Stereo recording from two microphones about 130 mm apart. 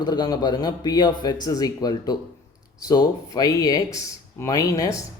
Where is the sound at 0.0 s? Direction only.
35° left (ahead or behind).